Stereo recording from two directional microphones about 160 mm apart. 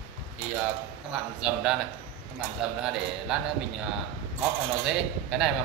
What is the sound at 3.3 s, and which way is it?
Speech, 5° right (ahead or behind).